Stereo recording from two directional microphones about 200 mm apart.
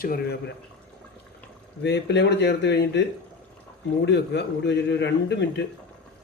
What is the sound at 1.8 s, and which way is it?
A man's voice, 60° left (ahead or behind).